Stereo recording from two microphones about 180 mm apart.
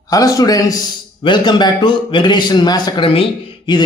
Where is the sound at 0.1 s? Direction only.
20° left (ahead or behind).